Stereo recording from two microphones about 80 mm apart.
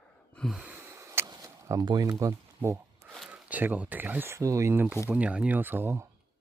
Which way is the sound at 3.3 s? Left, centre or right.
Centre.